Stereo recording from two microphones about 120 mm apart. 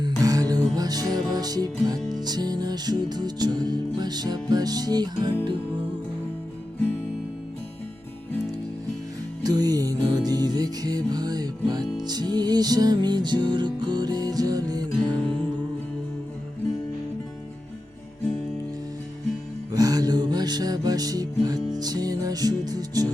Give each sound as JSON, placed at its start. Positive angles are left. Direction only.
{"t": 0.0, "sound": "music", "side_deg": -30}
{"t": 9.4, "sound": "music", "side_deg": -35}
{"t": 15.0, "sound": "music", "side_deg": 10}
{"t": 19.7, "sound": "music", "side_deg": -30}